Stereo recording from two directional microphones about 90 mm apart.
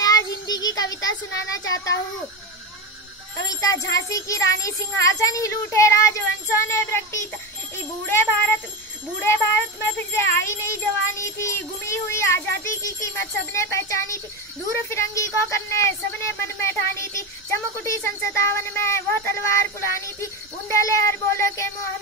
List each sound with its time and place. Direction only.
0.0 s child singing: 45° left (ahead or behind)
3.3 s a child's voice: 35° left (ahead or behind)